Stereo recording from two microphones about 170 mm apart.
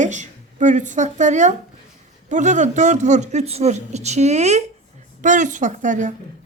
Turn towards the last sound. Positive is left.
turn(degrees=-45)  # may be behind; listen again after turning